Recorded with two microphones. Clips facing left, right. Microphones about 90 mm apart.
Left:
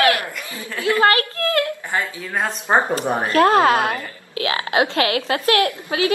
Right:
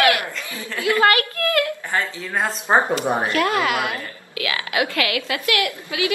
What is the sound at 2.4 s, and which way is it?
Speech, 5° right (ahead or behind).